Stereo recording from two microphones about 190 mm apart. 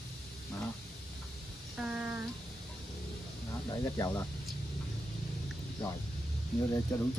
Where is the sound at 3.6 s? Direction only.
20° left (ahead or behind).